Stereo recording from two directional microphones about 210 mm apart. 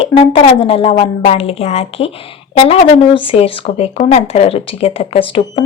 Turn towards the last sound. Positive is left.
turn(degrees=25)  # may be behind; listen again after turning